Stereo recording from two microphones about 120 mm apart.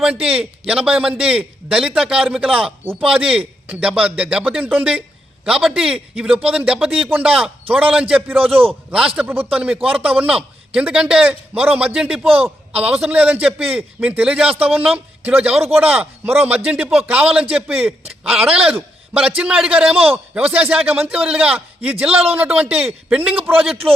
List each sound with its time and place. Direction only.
0.0 s a man's voice: 10° right (ahead or behind)
22.1 s a man's voice: 55° right (ahead or behind)
22.4 s a man's voice: 15° right (ahead or behind)